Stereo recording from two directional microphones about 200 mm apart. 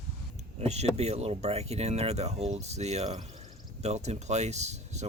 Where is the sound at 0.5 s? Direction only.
35° right (ahead or behind).